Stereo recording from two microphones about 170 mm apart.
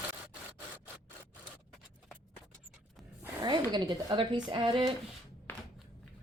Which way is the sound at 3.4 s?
25° right (ahead or behind).